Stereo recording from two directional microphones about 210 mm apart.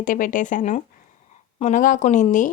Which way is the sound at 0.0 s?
40° left (ahead or behind).